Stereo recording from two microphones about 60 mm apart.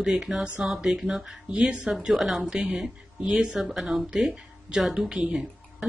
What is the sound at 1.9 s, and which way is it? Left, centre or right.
Speech, centre.